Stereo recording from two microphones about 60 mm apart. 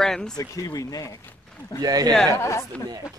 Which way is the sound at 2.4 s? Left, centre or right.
Left.